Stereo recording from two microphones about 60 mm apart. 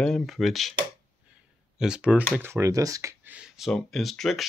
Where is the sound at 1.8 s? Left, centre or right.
Centre.